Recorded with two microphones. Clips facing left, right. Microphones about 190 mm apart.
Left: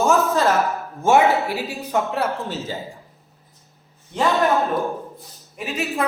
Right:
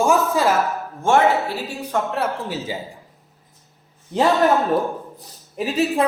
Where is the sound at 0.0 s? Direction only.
10° right (ahead or behind).